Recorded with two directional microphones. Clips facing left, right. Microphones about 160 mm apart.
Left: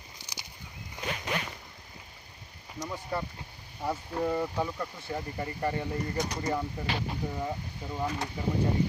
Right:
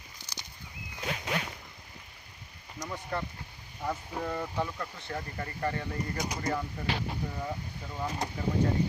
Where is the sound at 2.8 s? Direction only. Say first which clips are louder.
Left 1 dB; 10° left (ahead or behind).